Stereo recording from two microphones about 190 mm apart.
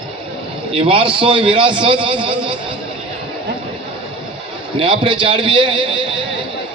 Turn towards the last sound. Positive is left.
turn(degrees=-25)  # may be behind; listen again after turning